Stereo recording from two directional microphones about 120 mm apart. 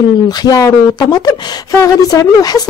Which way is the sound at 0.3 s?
35° left (ahead or behind).